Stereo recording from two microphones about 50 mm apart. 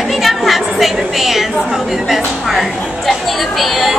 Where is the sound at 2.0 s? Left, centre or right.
Centre.